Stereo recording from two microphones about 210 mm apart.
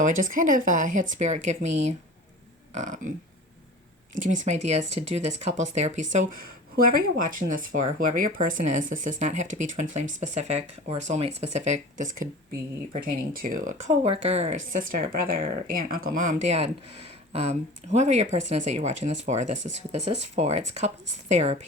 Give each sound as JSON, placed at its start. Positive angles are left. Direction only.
{"t": 0.0, "sound": "speech", "side_deg": -40}
{"t": 2.7, "sound": "speech", "side_deg": -35}
{"t": 4.2, "sound": "speech", "side_deg": -35}